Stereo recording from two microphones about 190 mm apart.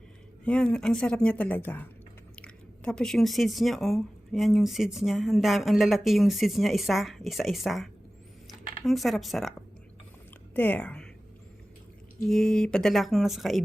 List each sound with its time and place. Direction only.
0.4 s a woman's voice: 5° left (ahead or behind)
12.3 s speech: centre (ahead or behind)